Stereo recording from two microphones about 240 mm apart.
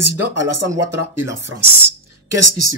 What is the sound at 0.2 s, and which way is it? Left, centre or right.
Speech, right.